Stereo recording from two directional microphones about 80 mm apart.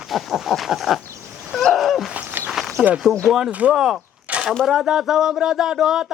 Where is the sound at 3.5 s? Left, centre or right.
Centre.